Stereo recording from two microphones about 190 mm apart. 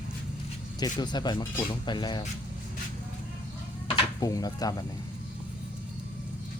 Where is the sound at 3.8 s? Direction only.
20° left (ahead or behind).